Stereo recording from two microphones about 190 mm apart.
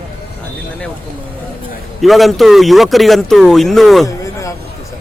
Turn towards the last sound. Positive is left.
turn(degrees=15)  # may be behind; listen again after turning